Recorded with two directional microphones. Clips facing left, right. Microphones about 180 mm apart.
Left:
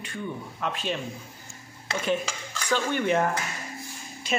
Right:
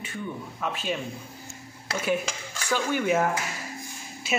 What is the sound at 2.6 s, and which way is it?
Speech, 10° right (ahead or behind).